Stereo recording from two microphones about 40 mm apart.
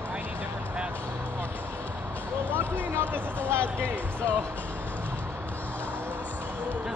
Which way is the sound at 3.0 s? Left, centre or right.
Right.